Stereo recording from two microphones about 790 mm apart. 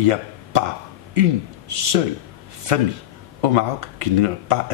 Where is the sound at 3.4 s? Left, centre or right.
Right.